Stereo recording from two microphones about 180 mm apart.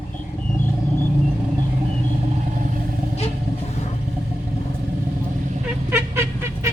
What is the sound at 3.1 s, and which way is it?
Vehicle, 35° left (ahead or behind).